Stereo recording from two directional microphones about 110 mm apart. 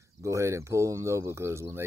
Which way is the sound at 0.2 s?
25° right (ahead or behind).